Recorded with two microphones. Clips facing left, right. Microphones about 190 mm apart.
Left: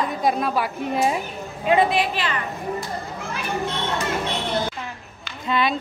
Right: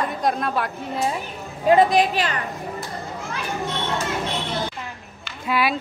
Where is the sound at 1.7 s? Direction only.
40° right (ahead or behind).